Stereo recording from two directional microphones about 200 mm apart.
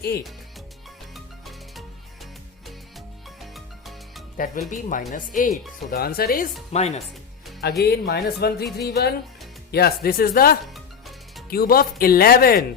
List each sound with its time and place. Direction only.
1.1 s music: centre (ahead or behind)
3.2 s music: centre (ahead or behind)
4.4 s speech: 45° left (ahead or behind)
6.7 s speech: 35° left (ahead or behind)
7.6 s speech: 55° left (ahead or behind)
8.8 s music: 55° left (ahead or behind)
9.7 s speech: 50° left (ahead or behind)
10.8 s music: centre (ahead or behind)
11.4 s speech: 50° left (ahead or behind)